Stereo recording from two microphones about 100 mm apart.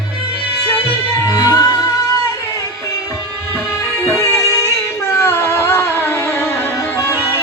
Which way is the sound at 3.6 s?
25° left (ahead or behind).